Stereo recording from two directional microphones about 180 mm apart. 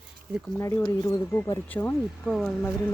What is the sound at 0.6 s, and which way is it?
Speech, 15° left (ahead or behind).